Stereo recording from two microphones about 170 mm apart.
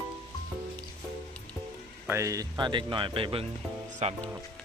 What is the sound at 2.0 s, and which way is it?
Speech, 15° right (ahead or behind).